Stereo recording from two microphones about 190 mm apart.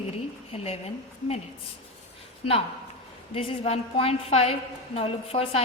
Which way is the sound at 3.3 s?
30° left (ahead or behind).